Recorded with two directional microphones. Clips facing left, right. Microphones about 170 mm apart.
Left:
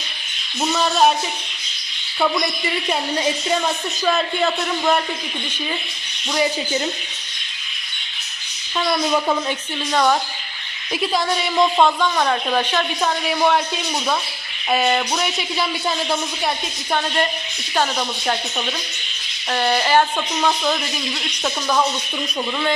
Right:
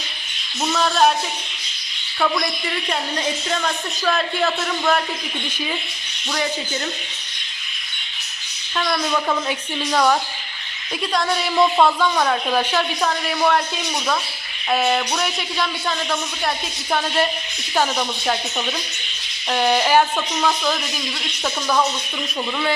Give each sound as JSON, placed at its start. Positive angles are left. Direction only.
{"t": 0.7, "sound": "a woman's voice", "side_deg": 5}
{"t": 4.0, "sound": "a woman's voice", "side_deg": 0}
{"t": 6.3, "sound": "speech", "side_deg": 10}
{"t": 8.8, "sound": "speech", "side_deg": 10}
{"t": 9.5, "sound": "a woman's voice", "side_deg": 0}
{"t": 14.7, "sound": "a woman's voice", "side_deg": 0}
{"t": 19.5, "sound": "a woman's voice", "side_deg": -10}